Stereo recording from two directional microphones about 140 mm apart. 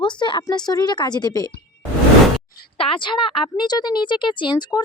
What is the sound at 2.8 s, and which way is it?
Speech, 40° left (ahead or behind).